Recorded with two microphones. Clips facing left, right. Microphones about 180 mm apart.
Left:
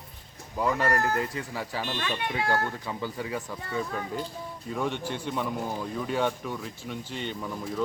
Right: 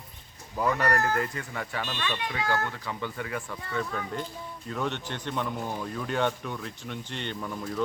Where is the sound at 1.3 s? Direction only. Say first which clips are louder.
Left 1 dB; 10° left (ahead or behind).